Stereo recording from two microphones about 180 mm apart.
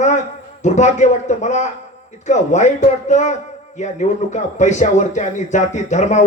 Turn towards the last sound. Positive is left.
turn(degrees=40)  # may be behind; listen again after turning